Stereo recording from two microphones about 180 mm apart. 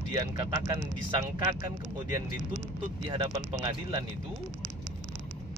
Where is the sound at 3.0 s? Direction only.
25° right (ahead or behind).